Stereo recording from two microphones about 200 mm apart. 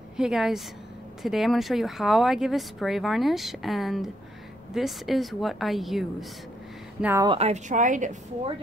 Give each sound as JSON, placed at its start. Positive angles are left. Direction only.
{"t": 0.2, "sound": "speech", "side_deg": 0}
{"t": 7.2, "sound": "a woman's voice", "side_deg": -30}